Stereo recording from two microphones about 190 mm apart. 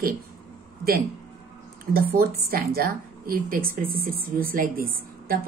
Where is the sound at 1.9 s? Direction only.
50° right (ahead or behind).